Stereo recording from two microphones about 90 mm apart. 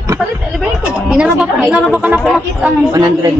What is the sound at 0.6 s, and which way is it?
A woman's voice, 10° right (ahead or behind).